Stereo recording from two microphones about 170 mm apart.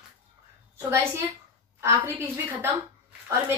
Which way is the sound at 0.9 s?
15° right (ahead or behind).